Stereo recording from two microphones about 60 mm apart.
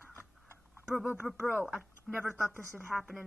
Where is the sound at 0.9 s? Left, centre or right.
Left.